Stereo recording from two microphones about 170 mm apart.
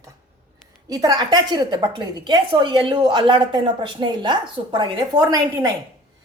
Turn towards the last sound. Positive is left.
turn(degrees=-20)  # may be behind; listen again after turning